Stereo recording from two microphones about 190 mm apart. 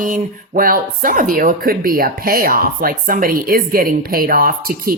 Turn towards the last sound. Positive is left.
turn(degrees=-50)  # may be behind; listen again after turning